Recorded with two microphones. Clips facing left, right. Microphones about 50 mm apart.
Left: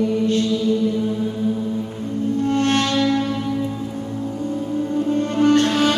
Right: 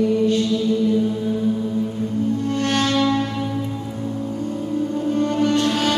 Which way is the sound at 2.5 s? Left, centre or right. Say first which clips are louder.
Left 5 dB; left.